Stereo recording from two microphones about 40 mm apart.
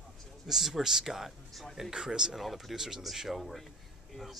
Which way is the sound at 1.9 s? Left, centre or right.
Centre.